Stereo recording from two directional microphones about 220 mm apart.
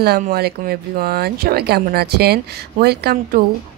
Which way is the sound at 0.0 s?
45° right (ahead or behind).